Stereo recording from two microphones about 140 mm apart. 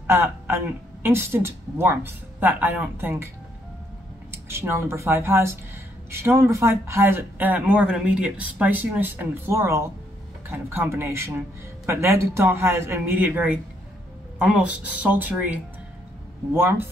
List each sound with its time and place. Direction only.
0.0 s speech: 20° right (ahead or behind)
4.3 s speech: 20° right (ahead or behind)